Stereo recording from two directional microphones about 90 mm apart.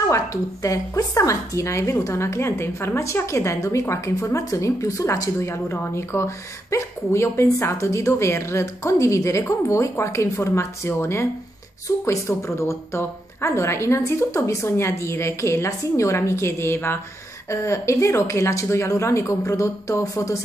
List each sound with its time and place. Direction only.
0.1 s a woman's voice: 35° left (ahead or behind)